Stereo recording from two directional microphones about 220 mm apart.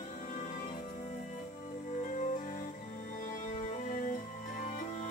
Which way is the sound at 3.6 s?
30° left (ahead or behind).